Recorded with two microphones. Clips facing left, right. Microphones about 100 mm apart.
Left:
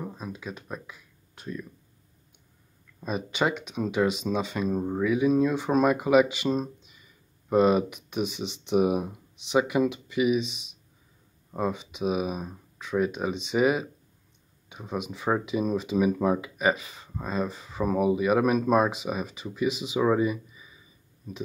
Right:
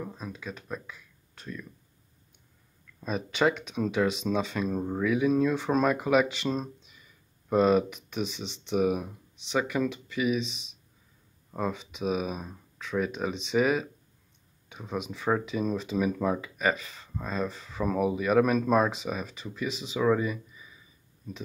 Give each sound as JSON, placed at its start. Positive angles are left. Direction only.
{"t": 0.0, "sound": "speech", "side_deg": 10}
{"t": 3.0, "sound": "speech", "side_deg": 5}